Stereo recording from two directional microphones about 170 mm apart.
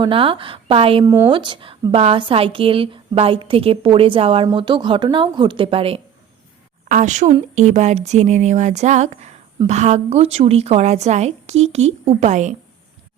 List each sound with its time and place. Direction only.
0.0 s speech: 30° right (ahead or behind)
1.0 s speech: 15° right (ahead or behind)
1.3 s a woman's voice: 30° right (ahead or behind)
6.8 s speech: 45° right (ahead or behind)